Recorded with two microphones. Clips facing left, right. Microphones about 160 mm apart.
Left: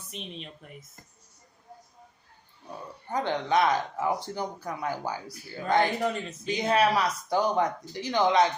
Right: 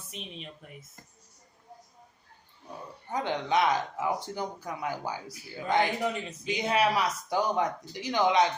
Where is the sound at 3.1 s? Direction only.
15° right (ahead or behind).